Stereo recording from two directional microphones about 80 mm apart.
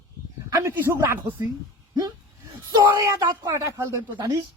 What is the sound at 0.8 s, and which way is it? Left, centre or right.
Speech, right.